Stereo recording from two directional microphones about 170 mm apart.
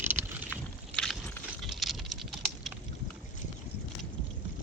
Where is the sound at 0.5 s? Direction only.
10° left (ahead or behind).